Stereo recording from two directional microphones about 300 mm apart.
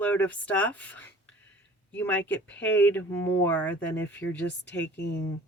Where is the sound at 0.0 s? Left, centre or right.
Centre.